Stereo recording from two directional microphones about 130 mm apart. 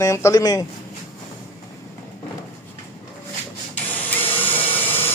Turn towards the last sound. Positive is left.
turn(degrees=15)  # may be behind; listen again after turning